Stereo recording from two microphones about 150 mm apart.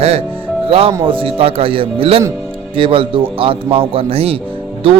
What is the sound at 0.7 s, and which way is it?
A man's voice, 35° right (ahead or behind).